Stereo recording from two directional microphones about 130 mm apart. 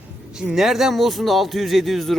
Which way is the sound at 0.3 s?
5° right (ahead or behind).